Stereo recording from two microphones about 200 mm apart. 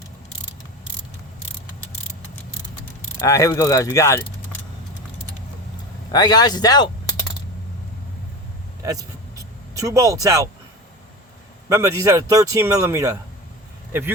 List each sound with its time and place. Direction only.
3.2 s speech: 15° left (ahead or behind)
6.1 s speech: 20° left (ahead or behind)
8.8 s speech: 15° right (ahead or behind)
11.7 s speech: 15° right (ahead or behind)